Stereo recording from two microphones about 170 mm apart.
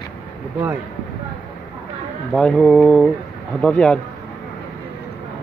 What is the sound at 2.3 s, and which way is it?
Speech, 5° left (ahead or behind).